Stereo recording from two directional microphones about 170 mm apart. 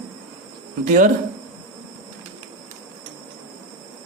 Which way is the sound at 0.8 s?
50° right (ahead or behind).